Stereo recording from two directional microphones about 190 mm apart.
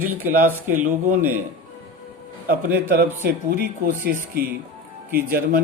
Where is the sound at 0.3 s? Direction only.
45° right (ahead or behind).